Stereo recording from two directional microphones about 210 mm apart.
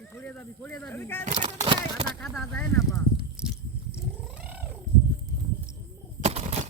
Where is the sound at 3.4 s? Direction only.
5° right (ahead or behind).